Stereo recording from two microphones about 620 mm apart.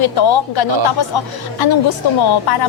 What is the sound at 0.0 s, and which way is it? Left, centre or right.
Speech, left.